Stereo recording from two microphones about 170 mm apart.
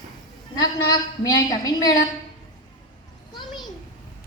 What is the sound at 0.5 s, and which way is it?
A woman's voice, 25° left (ahead or behind).